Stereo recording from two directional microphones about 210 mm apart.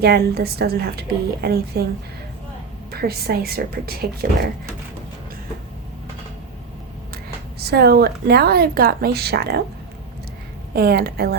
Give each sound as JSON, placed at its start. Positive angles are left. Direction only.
{"t": 0.0, "sound": "speech", "side_deg": -50}
{"t": 2.9, "sound": "speech", "side_deg": -50}
{"t": 7.6, "sound": "speech", "side_deg": -50}
{"t": 10.8, "sound": "speech", "side_deg": -50}